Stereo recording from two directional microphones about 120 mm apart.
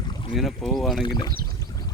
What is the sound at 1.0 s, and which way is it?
Speech, 40° left (ahead or behind).